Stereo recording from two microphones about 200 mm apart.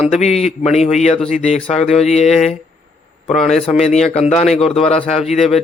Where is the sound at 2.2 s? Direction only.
Centre (ahead or behind).